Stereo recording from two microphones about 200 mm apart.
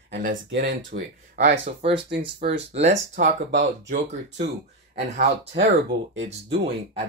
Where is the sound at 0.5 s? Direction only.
45° right (ahead or behind).